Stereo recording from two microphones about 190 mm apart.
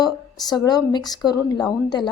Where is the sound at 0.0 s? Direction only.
20° left (ahead or behind).